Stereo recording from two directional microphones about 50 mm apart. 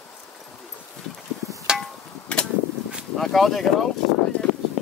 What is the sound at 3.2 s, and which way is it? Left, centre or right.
Speech, centre.